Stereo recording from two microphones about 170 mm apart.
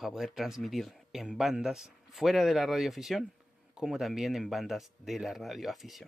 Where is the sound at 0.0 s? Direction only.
Centre (ahead or behind).